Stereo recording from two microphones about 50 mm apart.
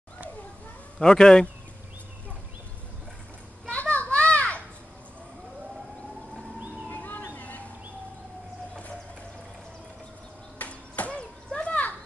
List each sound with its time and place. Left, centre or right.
0.9 s speech: centre
3.6 s children playing: left
6.9 s a sound: left
10.6 s children playing: left